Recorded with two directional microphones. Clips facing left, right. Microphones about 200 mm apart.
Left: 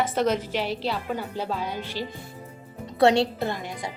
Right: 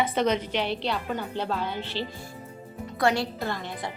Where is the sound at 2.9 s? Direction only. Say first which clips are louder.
Left 6 dB; 25° left (ahead or behind).